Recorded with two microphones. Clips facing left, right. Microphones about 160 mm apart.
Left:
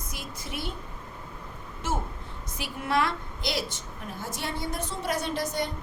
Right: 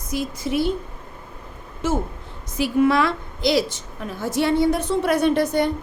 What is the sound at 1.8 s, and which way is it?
A woman's voice, 90° right.